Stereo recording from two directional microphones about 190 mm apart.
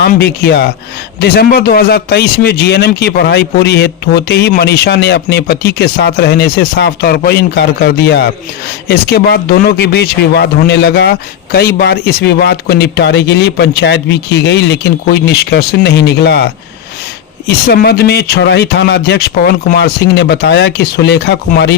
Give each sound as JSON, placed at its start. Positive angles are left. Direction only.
{"t": 0.0, "sound": "a man's voice", "side_deg": 60}